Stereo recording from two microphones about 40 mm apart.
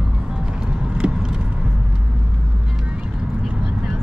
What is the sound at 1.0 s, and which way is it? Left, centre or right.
Vehicle, right.